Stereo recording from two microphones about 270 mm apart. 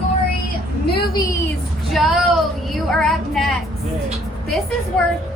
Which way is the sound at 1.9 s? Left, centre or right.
Centre.